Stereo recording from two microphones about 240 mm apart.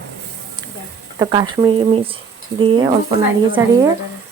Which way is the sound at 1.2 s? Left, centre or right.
Centre.